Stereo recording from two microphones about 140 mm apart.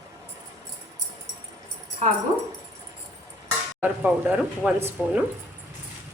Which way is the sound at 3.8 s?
10° right (ahead or behind).